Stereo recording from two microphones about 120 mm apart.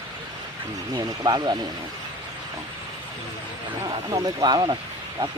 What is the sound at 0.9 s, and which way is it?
Speech, 35° right (ahead or behind).